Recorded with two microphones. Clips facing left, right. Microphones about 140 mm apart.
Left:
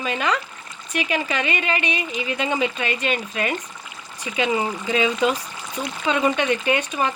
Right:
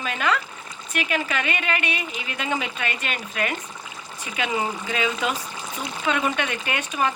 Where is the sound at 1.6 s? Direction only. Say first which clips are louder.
Left 2 dB; 5° right (ahead or behind).